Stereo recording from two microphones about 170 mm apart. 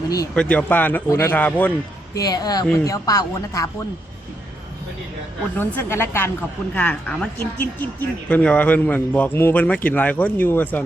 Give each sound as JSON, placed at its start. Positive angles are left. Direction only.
{"t": 0.3, "sound": "speech", "side_deg": 5}
{"t": 2.1, "sound": "speech", "side_deg": 20}
{"t": 5.5, "sound": "speech", "side_deg": 15}